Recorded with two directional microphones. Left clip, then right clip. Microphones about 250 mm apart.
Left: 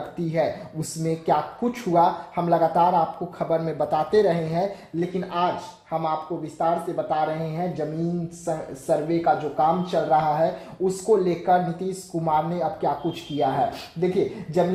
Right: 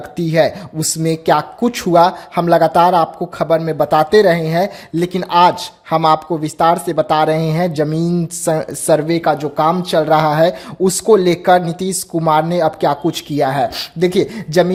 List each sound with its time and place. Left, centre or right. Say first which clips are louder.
0.2 s speech: right 11 dB; right
4.9 s speech: right 13 dB; right